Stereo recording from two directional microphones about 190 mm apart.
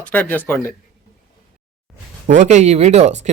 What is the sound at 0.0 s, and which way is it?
Speech, 5° left (ahead or behind).